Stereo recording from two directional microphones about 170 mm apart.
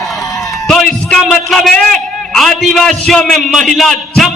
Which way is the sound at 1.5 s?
5° left (ahead or behind).